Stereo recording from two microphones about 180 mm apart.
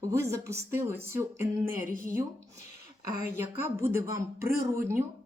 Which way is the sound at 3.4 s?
15° right (ahead or behind).